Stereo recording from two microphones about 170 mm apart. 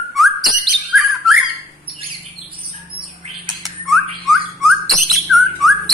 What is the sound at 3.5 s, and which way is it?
Bird, centre (ahead or behind).